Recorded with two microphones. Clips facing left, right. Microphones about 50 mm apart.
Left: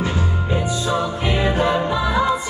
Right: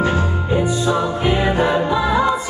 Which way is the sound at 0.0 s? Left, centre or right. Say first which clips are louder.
Right 5 dB; right.